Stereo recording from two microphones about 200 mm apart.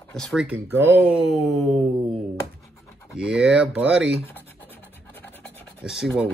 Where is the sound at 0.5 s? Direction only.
10° right (ahead or behind).